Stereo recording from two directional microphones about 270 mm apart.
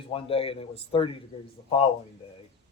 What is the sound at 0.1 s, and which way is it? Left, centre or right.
Speech, left.